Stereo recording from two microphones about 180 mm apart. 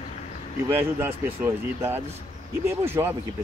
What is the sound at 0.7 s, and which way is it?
Speech, 10° right (ahead or behind).